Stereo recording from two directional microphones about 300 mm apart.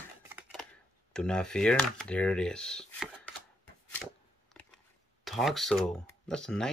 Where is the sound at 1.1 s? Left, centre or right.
Centre.